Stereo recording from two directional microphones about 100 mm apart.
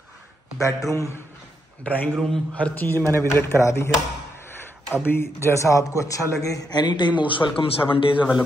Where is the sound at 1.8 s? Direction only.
15° left (ahead or behind).